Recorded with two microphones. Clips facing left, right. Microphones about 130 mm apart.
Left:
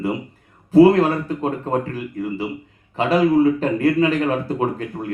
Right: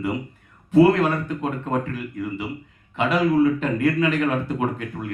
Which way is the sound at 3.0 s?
35° left (ahead or behind).